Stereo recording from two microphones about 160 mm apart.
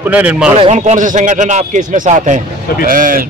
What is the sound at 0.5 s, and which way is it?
Speech, 40° right (ahead or behind).